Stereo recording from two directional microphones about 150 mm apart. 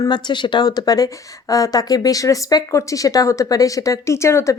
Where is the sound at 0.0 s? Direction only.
30° left (ahead or behind).